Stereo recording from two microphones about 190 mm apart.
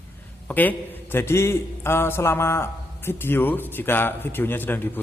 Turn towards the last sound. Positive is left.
turn(degrees=10)  # may be behind; listen again after turning